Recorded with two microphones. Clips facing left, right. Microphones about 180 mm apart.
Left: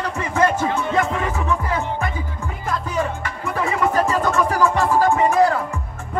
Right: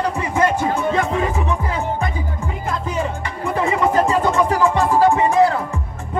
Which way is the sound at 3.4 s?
25° right (ahead or behind).